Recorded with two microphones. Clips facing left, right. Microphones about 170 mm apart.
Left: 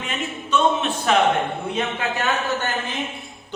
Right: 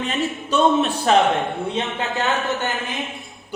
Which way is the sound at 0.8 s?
35° right (ahead or behind).